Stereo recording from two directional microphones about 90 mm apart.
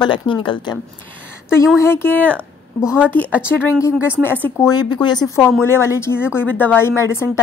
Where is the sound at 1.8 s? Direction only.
25° left (ahead or behind).